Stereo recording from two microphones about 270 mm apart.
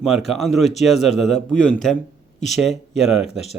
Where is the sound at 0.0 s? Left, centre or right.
Centre.